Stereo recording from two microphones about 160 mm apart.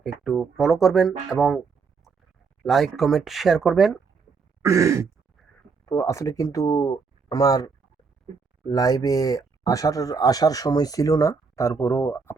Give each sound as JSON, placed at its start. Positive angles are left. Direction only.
{"t": 0.0, "sound": "speech", "side_deg": 0}
{"t": 2.6, "sound": "speech", "side_deg": 0}
{"t": 4.6, "sound": "throat clearing", "side_deg": -20}
{"t": 5.8, "sound": "speech", "side_deg": 20}